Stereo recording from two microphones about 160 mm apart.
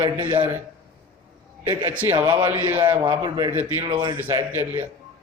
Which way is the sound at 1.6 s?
10° right (ahead or behind).